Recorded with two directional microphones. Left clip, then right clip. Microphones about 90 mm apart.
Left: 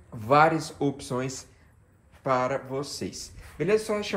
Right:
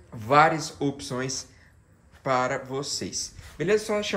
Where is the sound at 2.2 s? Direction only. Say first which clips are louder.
Right 1 dB; centre (ahead or behind).